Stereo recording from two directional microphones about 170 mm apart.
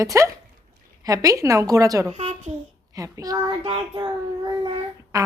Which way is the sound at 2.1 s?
35° right (ahead or behind).